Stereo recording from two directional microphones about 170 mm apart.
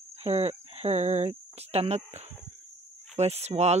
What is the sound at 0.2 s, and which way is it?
Speech, 40° right (ahead or behind).